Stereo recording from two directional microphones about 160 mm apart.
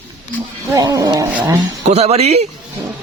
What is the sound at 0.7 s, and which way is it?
Speech, 20° right (ahead or behind).